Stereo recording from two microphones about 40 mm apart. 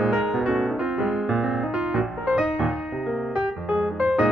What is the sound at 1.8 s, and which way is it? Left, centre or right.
Music, right.